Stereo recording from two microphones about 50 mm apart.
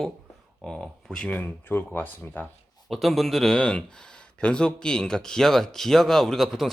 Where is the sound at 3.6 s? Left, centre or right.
Left; by 6.7 s centre.